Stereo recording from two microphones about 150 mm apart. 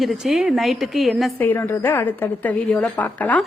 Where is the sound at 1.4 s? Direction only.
15° left (ahead or behind).